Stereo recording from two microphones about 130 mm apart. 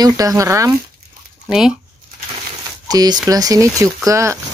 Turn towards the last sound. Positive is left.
turn(degrees=-25)  # may be behind; listen again after turning